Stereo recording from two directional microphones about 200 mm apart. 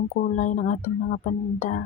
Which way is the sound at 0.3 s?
40° left (ahead or behind).